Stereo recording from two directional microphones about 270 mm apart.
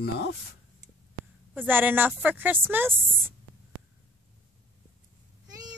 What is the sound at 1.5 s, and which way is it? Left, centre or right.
A woman's voice, centre.